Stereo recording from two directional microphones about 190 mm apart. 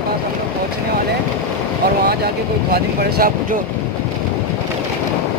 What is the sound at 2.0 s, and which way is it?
Speech, 55° right (ahead or behind).